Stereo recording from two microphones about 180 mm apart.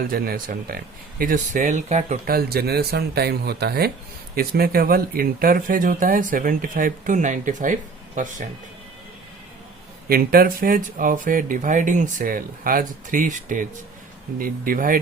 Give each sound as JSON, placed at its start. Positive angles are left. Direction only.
{"t": 0.1, "sound": "speech", "side_deg": -50}
{"t": 2.2, "sound": "speech", "side_deg": -60}
{"t": 10.1, "sound": "speech", "side_deg": -55}